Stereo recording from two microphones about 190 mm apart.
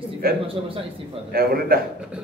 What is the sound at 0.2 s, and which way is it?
A man's voice, 50° right (ahead or behind).